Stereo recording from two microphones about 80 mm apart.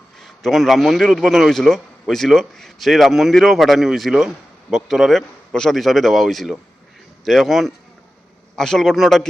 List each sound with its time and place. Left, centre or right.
0.2 s a man's voice: centre